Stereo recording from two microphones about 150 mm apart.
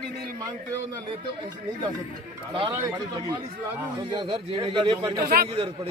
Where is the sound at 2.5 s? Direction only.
35° right (ahead or behind).